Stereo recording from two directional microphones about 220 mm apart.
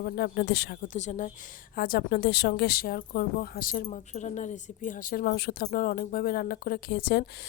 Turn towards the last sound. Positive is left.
turn(degrees=45)  # may be behind; listen again after turning